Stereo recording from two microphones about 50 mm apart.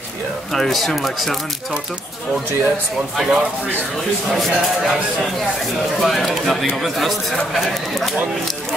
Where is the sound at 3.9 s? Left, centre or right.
Centre.